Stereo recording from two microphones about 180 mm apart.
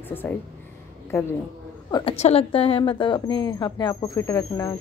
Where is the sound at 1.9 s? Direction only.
30° left (ahead or behind).